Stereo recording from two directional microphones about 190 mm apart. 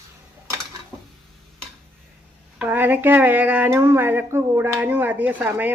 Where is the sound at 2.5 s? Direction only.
10° right (ahead or behind).